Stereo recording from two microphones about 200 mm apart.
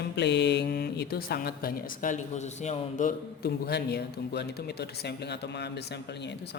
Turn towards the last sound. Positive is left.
turn(degrees=55)  # may be behind; listen again after turning